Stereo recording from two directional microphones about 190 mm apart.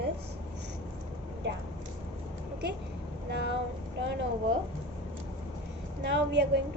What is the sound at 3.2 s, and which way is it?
Vehicle, 65° right (ahead or behind).